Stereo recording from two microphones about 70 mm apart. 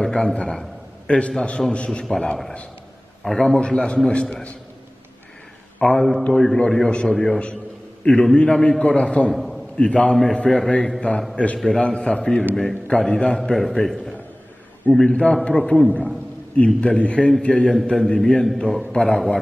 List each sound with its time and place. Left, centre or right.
0.0 s a man's voice: centre
2.0 s a man's voice: centre
5.9 s a man's voice: centre
9.3 s a sound: centre
9.8 s a man's voice: centre